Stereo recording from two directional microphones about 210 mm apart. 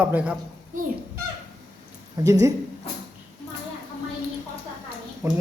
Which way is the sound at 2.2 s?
15° right (ahead or behind).